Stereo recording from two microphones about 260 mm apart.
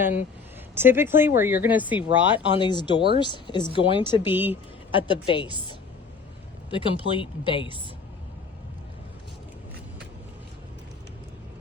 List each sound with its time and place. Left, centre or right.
0.0 s speech: centre
2.6 s speech: centre
4.3 s speech: centre
4.9 s speech: centre